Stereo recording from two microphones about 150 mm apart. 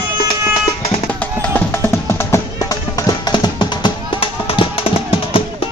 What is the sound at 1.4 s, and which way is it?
Music, 10° left (ahead or behind).